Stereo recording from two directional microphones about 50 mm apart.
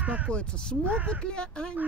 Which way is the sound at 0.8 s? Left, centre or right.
Right.